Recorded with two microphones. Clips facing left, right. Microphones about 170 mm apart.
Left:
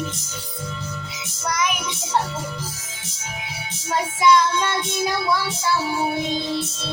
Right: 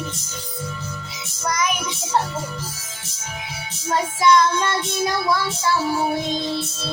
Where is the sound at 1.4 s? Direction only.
Centre (ahead or behind).